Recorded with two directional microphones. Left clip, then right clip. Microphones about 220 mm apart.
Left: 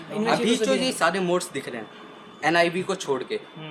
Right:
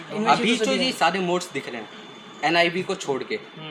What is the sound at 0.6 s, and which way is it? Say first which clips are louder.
Speech: right 1 dB; 30° left (ahead or behind).